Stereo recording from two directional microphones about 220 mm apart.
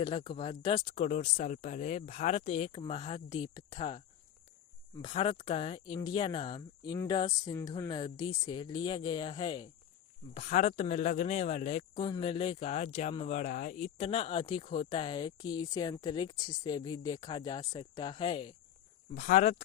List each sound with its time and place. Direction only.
0.0 s speech: 25° left (ahead or behind)
10.3 s speech: 35° left (ahead or behind)
19.1 s speech: 35° left (ahead or behind)